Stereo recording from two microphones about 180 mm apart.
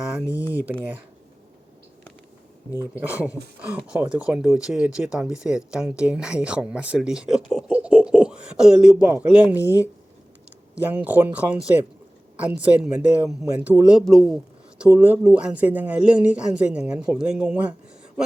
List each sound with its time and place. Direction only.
0.0 s a sound: 5° right (ahead or behind)
0.3 s speech: 15° left (ahead or behind)
0.5 s speech: 10° right (ahead or behind)
2.9 s speech: 10° right (ahead or behind)
9.6 s speech: 15° left (ahead or behind)
10.8 s speech: 10° right (ahead or behind)